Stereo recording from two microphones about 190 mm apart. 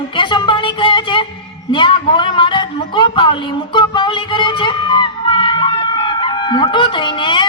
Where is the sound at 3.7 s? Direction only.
25° left (ahead or behind).